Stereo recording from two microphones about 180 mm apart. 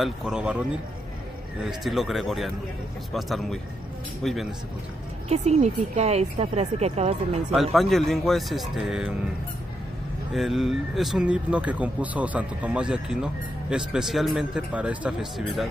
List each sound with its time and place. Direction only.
0.0 s speech: 5° right (ahead or behind)
5.3 s speech: 35° right (ahead or behind)
7.7 s speech: centre (ahead or behind)
10.3 s speech: centre (ahead or behind)